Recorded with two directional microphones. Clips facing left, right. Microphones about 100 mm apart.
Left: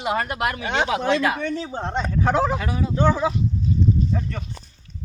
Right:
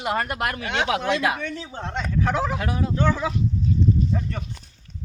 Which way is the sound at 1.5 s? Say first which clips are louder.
Left 5 dB; 30° left (ahead or behind).